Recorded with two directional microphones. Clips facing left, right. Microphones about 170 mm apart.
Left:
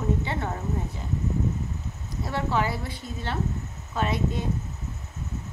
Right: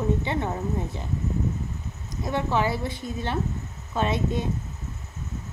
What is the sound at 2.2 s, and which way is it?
A woman's voice, 20° right (ahead or behind).